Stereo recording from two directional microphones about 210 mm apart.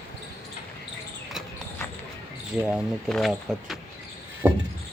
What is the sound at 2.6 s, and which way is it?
Speech, centre (ahead or behind).